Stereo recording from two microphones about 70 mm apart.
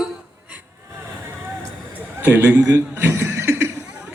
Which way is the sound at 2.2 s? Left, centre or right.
Right.